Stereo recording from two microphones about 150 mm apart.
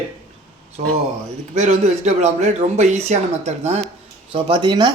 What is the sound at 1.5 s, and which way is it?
Speech, 50° right (ahead or behind).